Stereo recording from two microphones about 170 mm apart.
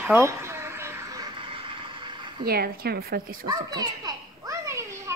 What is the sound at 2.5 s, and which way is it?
Speech, 65° right (ahead or behind).